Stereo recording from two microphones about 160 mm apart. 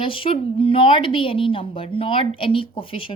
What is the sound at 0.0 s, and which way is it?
A woman's voice, 35° left (ahead or behind).